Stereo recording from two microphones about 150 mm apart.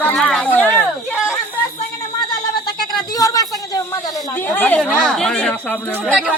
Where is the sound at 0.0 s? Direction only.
10° left (ahead or behind).